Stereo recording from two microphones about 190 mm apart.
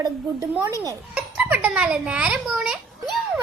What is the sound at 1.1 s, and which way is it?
A child's voice, 5° right (ahead or behind).